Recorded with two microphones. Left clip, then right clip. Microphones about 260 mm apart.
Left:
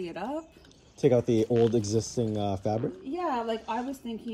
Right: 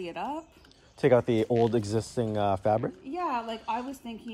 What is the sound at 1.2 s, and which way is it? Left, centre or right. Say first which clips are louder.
Speech: even; right.